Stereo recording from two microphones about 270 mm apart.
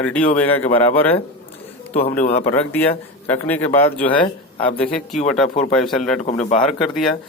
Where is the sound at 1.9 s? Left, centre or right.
Left.